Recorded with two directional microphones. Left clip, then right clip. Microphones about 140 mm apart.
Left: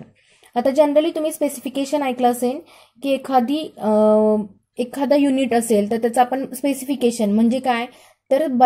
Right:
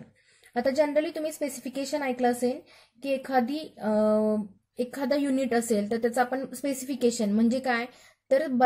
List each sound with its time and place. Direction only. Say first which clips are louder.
0.5 s a woman's voice: left 9 dB; 20° left (ahead or behind)